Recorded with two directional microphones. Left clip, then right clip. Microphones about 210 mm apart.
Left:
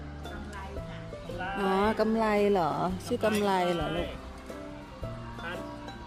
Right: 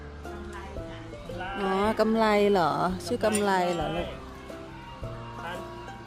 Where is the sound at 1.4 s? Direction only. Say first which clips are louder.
Even; 5° left (ahead or behind).